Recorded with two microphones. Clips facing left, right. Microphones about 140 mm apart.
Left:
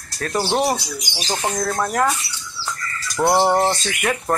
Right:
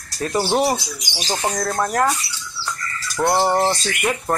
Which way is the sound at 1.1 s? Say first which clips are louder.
Right 1 dB; 20° left (ahead or behind).